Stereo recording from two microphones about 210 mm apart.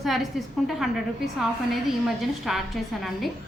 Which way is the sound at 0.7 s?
Centre (ahead or behind).